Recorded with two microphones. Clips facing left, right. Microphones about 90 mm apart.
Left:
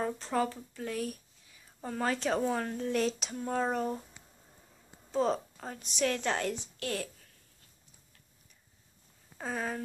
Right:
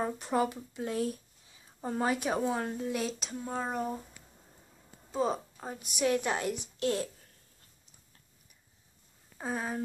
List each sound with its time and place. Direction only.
0.0 s speech: 15° right (ahead or behind)
5.1 s speech: 5° right (ahead or behind); by 7.1 s 20° right (ahead or behind)
9.4 s speech: 10° right (ahead or behind)